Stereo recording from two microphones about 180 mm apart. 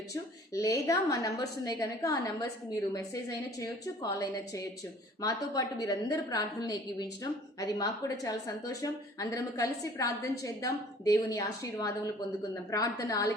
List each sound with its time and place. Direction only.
0.1 s a woman's voice: 20° left (ahead or behind)